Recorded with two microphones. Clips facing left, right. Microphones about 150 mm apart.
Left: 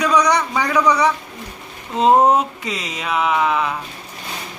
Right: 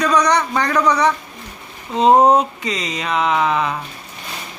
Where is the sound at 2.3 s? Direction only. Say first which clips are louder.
Right 2 dB; 5° left (ahead or behind).